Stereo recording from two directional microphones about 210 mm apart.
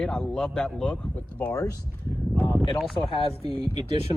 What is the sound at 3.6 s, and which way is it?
Speech, 20° right (ahead or behind).